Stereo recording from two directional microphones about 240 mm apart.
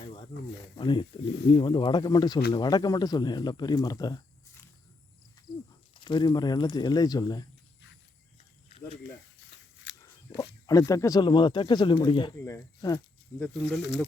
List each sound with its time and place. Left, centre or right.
0.0 s snake: centre
0.8 s speech: centre
5.5 s cricket: centre
5.9 s speech: centre
10.0 s a sound: centre
10.7 s speech: centre
13.4 s speech: centre